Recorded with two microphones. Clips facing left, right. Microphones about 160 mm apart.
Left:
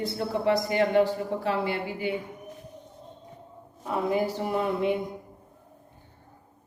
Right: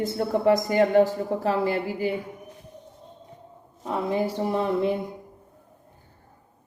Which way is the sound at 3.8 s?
25° right (ahead or behind).